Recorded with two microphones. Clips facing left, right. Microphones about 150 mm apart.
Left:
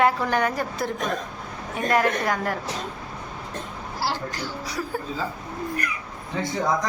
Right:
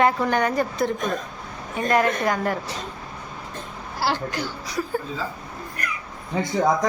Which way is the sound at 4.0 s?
65° right (ahead or behind).